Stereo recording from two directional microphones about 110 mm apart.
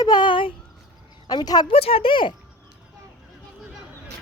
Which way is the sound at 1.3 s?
40° left (ahead or behind).